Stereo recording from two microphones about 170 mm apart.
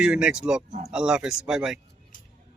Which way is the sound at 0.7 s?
45° right (ahead or behind).